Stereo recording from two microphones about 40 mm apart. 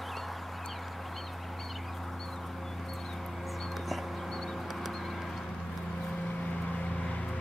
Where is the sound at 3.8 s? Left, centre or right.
Centre.